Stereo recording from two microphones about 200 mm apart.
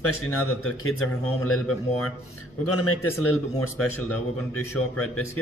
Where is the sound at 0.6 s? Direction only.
90° left.